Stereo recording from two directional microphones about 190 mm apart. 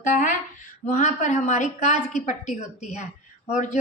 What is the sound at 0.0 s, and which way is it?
A woman's voice, 40° left (ahead or behind).